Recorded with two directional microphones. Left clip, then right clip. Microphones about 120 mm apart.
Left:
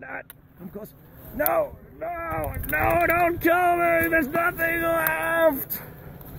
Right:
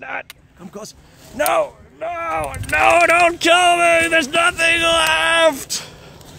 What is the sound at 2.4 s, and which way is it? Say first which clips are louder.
Speech: right 10 dB; 45° right (ahead or behind).